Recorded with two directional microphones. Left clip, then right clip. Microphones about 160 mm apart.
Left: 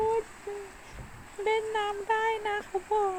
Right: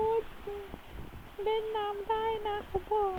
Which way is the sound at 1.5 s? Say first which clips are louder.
Left 3 dB; 20° left (ahead or behind).